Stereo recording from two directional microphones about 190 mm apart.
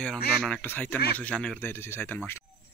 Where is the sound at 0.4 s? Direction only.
5° left (ahead or behind).